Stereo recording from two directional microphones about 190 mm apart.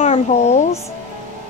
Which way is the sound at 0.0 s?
35° left (ahead or behind).